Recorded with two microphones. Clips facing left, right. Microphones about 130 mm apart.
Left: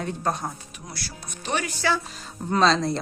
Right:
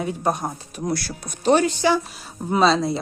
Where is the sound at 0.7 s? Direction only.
50° right (ahead or behind).